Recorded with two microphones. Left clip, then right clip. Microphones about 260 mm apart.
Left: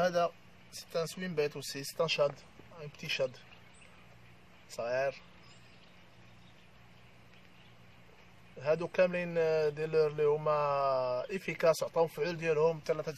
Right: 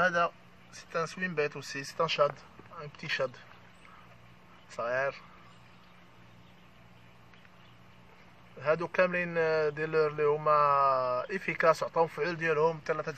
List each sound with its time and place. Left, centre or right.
0.0 s speech: centre
4.7 s speech: centre
8.5 s speech: centre